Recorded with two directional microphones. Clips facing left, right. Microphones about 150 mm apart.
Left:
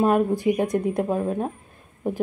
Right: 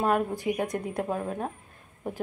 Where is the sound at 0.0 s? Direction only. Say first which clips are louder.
Left 6 dB; 20° left (ahead or behind).